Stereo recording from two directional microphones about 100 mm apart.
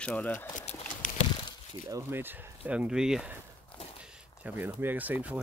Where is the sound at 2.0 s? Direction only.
20° right (ahead or behind).